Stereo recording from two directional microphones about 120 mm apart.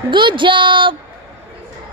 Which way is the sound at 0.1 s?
40° right (ahead or behind).